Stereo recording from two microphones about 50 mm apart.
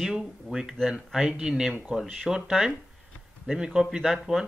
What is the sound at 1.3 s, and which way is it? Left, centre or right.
Speech, centre.